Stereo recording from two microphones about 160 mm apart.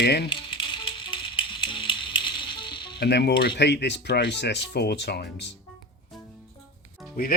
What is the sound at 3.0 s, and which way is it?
Speech, 90° left.